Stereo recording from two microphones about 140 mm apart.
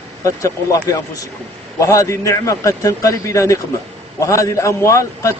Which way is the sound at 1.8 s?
20° left (ahead or behind).